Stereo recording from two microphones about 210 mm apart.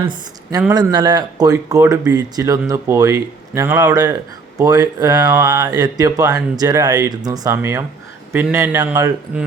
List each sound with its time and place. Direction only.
0.0 s speech: 20° right (ahead or behind)